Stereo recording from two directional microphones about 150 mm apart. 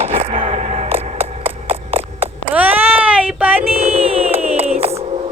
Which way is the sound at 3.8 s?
40° right (ahead or behind).